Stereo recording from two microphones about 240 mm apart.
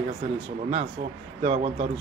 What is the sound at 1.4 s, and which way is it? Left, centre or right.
Speech, right.